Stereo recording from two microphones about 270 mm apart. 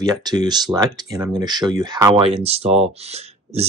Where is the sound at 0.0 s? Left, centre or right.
Centre.